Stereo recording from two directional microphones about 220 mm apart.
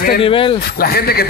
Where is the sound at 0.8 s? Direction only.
45° left (ahead or behind).